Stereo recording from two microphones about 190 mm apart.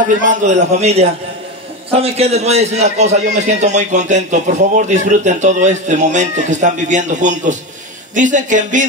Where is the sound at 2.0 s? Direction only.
35° right (ahead or behind).